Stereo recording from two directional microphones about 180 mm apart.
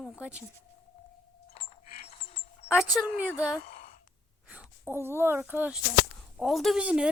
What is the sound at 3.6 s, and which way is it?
Sigh, 55° left (ahead or behind).